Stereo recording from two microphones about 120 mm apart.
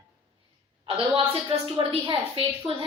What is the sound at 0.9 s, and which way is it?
A woman's voice, 50° right (ahead or behind).